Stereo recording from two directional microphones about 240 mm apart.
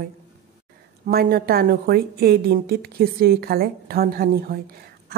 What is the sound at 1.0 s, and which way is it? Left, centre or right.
A woman's voice, right.